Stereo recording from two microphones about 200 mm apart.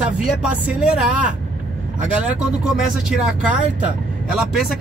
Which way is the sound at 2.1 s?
5° right (ahead or behind).